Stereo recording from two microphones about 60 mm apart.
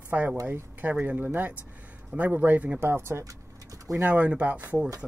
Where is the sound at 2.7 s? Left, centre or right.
Right.